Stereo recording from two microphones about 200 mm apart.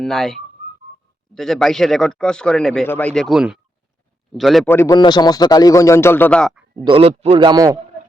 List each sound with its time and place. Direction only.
0.0 s speech: centre (ahead or behind)
4.7 s a man's voice: 15° left (ahead or behind)
6.8 s a man's voice: 30° right (ahead or behind)